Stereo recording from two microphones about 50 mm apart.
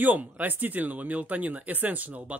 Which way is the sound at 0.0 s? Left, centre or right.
Right.